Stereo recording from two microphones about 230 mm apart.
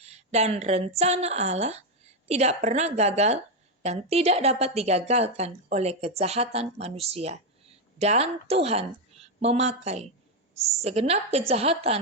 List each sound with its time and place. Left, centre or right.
0.0 s a woman's voice: right